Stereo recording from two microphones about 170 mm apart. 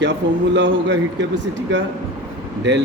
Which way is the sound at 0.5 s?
90° right.